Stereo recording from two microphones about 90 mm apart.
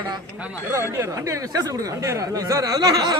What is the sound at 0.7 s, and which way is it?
Speech, 35° right (ahead or behind).